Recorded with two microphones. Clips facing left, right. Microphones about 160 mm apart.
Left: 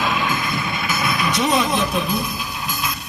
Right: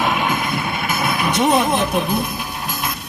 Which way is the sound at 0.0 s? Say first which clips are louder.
Right 2 dB; 60° right (ahead or behind).